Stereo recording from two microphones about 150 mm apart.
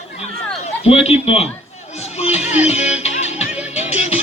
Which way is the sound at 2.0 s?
45° left (ahead or behind).